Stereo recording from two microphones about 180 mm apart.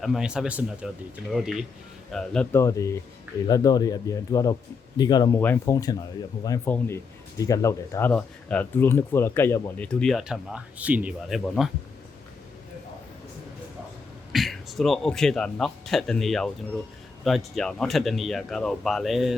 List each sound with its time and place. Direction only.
0.0 s speech: 5° right (ahead or behind)
14.3 s speech: centre (ahead or behind)